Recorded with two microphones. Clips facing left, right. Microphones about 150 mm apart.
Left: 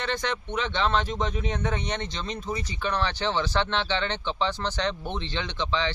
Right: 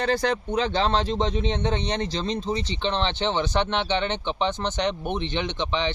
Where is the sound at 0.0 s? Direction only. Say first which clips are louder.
Right 6 dB; 35° right (ahead or behind).